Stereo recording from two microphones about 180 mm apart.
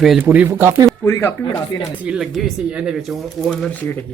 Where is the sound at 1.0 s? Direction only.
15° left (ahead or behind).